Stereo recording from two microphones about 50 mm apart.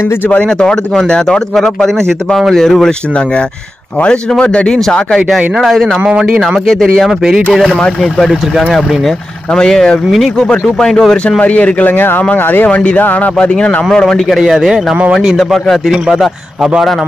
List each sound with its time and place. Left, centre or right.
0.3 s speech: left
4.7 s speech: centre
7.1 s speech: centre
7.6 s speech: centre
9.5 s speech: centre
10.1 s speech: centre
11.2 s speech: left
12.6 s speech: left
13.8 s speech: centre
14.4 s speech: centre
15.3 s speech: centre
15.9 s speech: centre